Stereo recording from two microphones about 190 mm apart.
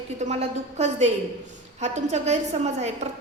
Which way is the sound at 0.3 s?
35° right (ahead or behind).